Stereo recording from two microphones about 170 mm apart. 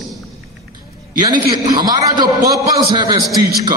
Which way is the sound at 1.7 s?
25° right (ahead or behind).